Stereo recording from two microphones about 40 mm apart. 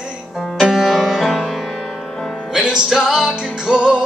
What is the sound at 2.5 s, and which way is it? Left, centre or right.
Music, centre.